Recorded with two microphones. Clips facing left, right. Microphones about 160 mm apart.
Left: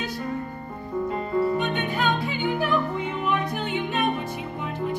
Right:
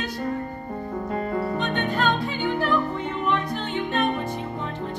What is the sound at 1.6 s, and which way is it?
Music, 10° left (ahead or behind).